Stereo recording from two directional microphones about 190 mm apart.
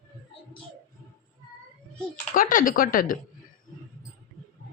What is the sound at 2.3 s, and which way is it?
Speech, 45° left (ahead or behind).